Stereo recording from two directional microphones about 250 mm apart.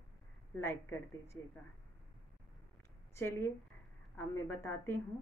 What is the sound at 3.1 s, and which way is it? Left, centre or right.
A woman's voice, centre.